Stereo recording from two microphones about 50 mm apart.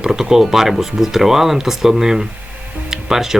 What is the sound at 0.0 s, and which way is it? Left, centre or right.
Speech, centre.